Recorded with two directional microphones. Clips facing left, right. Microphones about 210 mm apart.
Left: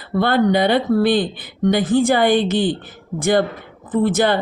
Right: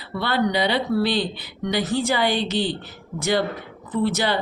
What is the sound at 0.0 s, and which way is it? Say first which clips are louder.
A woman's voice: left 6 dB; 50° left (ahead or behind).